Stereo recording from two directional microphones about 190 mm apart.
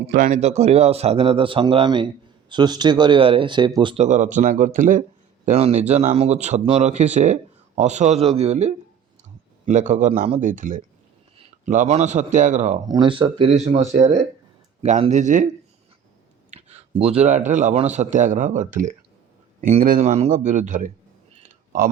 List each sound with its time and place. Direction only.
0.1 s speech: 40° right (ahead or behind); by 4.0 s 25° right (ahead or behind)
4.0 s speech: 40° right (ahead or behind)
5.5 s speech: 30° right (ahead or behind)
12.9 s speech: 25° right (ahead or behind); by 15.4 s 40° right (ahead or behind)
16.5 s a man's voice: 35° right (ahead or behind)